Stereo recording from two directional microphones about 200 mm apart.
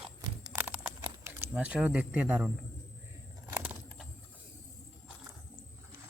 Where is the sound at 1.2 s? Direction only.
10° right (ahead or behind).